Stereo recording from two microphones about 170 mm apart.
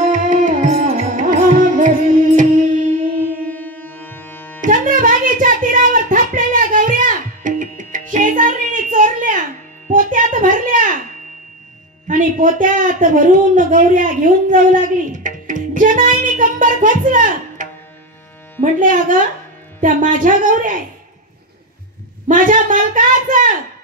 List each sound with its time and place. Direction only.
0.0 s music: 50° right (ahead or behind)
3.4 s music: 10° left (ahead or behind)
4.6 s music: 50° right (ahead or behind)
9.9 s a sound: 50° right (ahead or behind)
12.1 s a woman's voice: 50° right (ahead or behind)
22.3 s a sound: 50° right (ahead or behind)